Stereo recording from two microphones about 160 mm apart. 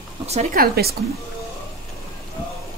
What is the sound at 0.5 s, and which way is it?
Speech, 70° right (ahead or behind).